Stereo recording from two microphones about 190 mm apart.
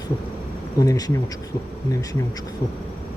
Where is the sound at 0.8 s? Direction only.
20° left (ahead or behind).